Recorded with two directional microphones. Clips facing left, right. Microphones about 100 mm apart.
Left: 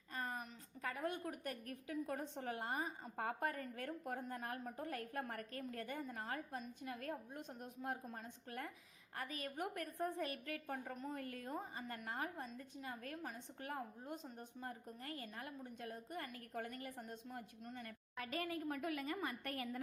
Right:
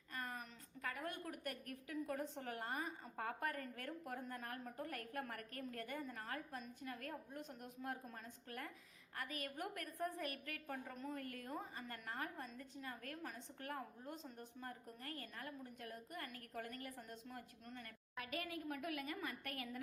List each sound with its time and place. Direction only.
0.1 s a woman's voice: 25° left (ahead or behind)
13.6 s a woman's voice: 20° left (ahead or behind)